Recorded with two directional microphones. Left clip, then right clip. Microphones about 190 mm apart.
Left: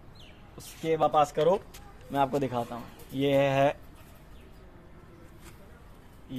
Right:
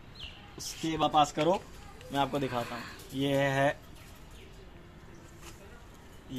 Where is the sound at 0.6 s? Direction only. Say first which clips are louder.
Left 4 dB; 30° left (ahead or behind).